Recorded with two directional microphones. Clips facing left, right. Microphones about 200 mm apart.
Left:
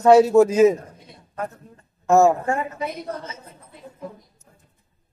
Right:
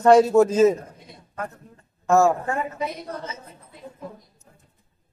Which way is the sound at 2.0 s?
20° left (ahead or behind).